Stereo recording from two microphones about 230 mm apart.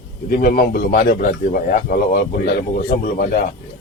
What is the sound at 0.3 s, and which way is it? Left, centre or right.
A man's voice, left.